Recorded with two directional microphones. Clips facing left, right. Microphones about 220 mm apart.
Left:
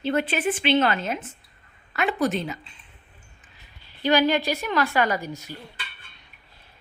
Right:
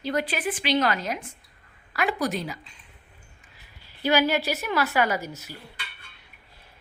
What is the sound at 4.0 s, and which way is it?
Speech, 10° right (ahead or behind).